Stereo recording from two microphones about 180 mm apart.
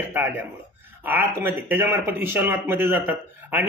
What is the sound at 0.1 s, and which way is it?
Speech, 10° right (ahead or behind).